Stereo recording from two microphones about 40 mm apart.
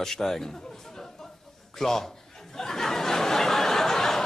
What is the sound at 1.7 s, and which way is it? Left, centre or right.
Speech, centre.